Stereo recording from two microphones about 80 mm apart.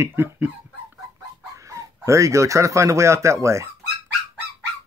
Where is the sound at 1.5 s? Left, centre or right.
Right.